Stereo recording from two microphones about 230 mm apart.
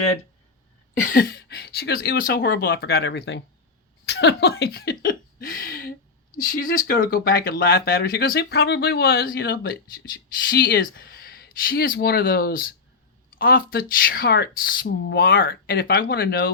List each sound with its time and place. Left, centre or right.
1.0 s speech: left
4.0 s a sound: left
6.3 s speech: left